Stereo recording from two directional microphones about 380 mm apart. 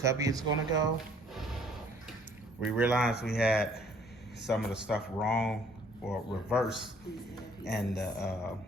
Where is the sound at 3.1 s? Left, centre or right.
Left.